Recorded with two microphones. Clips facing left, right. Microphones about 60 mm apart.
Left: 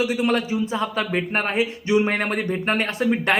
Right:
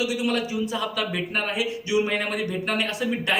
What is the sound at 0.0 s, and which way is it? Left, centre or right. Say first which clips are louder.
A man's voice: left 4 dB; left.